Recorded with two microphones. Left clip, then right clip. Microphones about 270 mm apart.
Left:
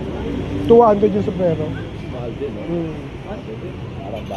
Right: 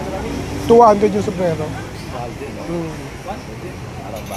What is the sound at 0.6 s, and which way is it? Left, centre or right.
Speech, right.